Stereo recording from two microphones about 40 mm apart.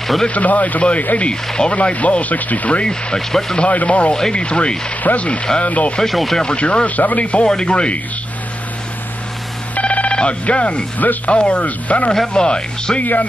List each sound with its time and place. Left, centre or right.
0.3 s speech: left
1.3 s speech: centre
1.7 s speech: left
2.8 s speech: left
3.2 s speech: centre
3.5 s speech: left
4.1 s speech: left
6.0 s speech: centre
6.4 s speech: left
7.4 s speech: left
9.8 s telephone bell ringing: left
11.2 s speech: left
12.1 s speech: centre
13.0 s speech: left